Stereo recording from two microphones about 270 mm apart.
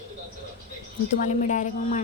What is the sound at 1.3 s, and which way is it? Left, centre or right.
Speech, left.